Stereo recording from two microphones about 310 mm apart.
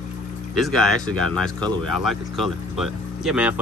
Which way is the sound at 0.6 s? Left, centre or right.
Centre.